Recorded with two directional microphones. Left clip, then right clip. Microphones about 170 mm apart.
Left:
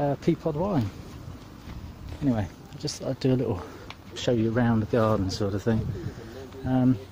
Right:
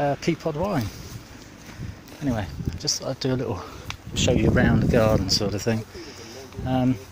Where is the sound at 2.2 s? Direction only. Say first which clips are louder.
Even; 10° left (ahead or behind).